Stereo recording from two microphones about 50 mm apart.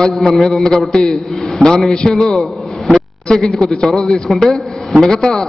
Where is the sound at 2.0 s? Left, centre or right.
Centre.